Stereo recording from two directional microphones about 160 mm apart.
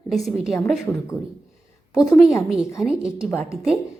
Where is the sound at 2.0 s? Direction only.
Centre (ahead or behind).